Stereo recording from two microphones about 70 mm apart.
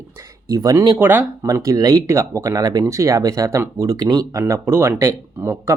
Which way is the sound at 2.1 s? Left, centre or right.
Right.